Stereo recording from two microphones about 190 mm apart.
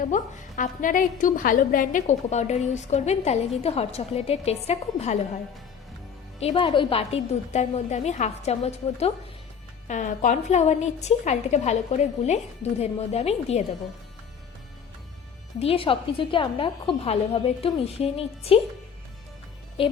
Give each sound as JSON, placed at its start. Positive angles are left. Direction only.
{"t": 0.0, "sound": "a woman's voice", "side_deg": 45}
{"t": 6.4, "sound": "a woman's voice", "side_deg": 25}
{"t": 15.5, "sound": "a woman's voice", "side_deg": 30}